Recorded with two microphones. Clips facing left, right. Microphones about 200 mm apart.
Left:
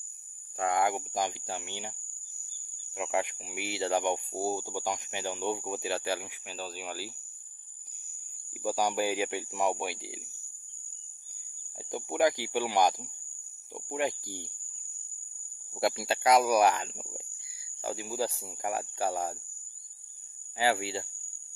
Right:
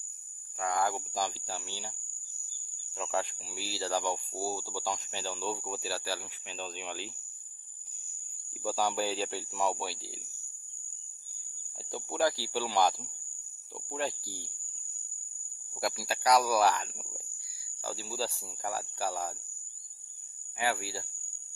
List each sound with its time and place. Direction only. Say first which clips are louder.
0.6 s speech: left 3 dB; 25° left (ahead or behind)
6.5 s speech: left 1 dB; 5° left (ahead or behind)
8.6 s speech: left 2 dB; 15° left (ahead or behind)
11.9 s speech: left 3 dB; 20° left (ahead or behind)
15.8 s speech: left 4 dB; 25° left (ahead or behind)
20.5 s speech: left 4 dB; 30° left (ahead or behind)